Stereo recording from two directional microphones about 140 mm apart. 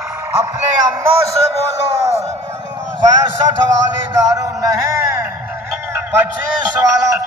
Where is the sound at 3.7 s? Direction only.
25° right (ahead or behind).